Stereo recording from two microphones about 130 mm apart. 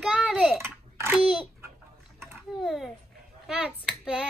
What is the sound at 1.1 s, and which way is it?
Speech, 10° right (ahead or behind).